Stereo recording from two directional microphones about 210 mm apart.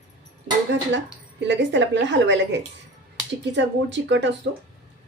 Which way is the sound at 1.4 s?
55° right (ahead or behind).